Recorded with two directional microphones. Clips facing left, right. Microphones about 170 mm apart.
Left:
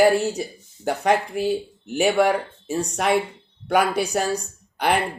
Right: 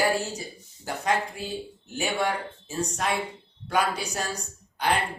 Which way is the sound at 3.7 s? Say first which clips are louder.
Left 6 dB; 65° left (ahead or behind).